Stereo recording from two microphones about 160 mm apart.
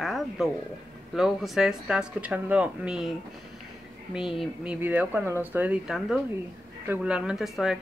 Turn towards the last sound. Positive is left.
turn(degrees=-5)  # may be behind; listen again after turning